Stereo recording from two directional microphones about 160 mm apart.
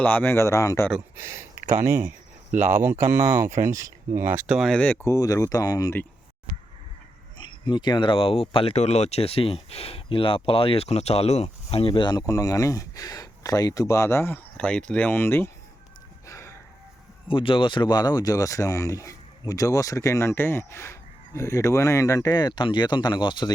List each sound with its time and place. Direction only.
0.0 s speech: 10° left (ahead or behind)
1.1 s speech: 15° right (ahead or behind); by 5.0 s 10° left (ahead or behind)
5.0 s speech: 20° left (ahead or behind)
7.3 s speech: 30° left (ahead or behind); by 15.4 s 15° left (ahead or behind)
16.2 s chicken: 20° left (ahead or behind)
17.2 s speech: 35° left (ahead or behind)